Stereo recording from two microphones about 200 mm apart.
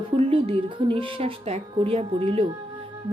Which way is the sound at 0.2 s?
25° right (ahead or behind).